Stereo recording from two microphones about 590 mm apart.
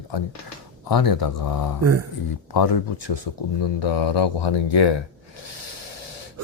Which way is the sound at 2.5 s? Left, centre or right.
Left.